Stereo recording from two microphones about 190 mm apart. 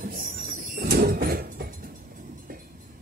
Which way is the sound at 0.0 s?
45° right (ahead or behind).